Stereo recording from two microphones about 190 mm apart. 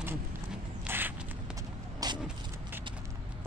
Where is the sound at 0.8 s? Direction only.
10° right (ahead or behind).